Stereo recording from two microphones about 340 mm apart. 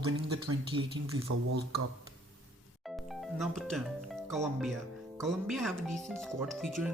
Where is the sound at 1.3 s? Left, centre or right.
Right.